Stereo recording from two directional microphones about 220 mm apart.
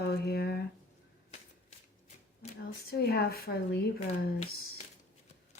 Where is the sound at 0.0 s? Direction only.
45° left (ahead or behind).